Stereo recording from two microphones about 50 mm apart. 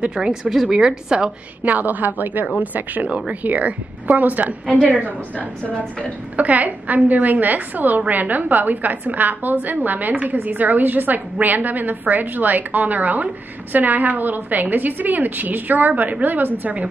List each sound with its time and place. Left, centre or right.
0.0 s a woman's voice: centre
1.6 s a woman's voice: right
3.1 s a woman's voice: right
6.3 s a woman's voice: right